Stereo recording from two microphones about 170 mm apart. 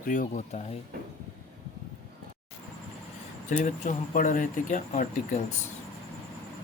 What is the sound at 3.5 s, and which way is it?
Speech, 50° left (ahead or behind).